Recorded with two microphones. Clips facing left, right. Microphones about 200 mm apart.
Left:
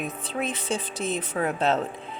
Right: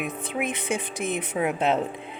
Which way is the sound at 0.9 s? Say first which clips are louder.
Even; 55° right (ahead or behind).